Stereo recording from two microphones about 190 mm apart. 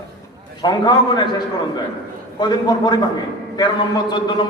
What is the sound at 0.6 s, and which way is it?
Speech, 20° left (ahead or behind).